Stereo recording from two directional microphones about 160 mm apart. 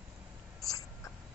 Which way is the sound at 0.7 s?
20° left (ahead or behind).